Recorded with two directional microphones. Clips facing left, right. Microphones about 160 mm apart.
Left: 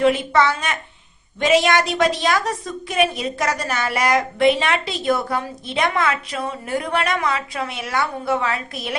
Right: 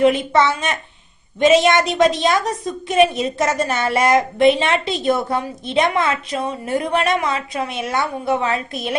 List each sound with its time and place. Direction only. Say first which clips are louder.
0.0 s a woman's voice: right 2 dB; 20° right (ahead or behind)